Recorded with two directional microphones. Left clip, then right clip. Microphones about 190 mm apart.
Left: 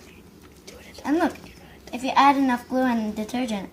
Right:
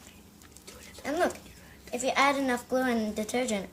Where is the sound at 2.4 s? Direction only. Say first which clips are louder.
Left 4 dB; 40° right (ahead or behind).